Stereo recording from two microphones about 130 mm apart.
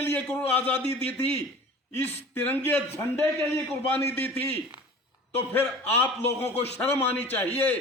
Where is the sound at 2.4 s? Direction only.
15° left (ahead or behind).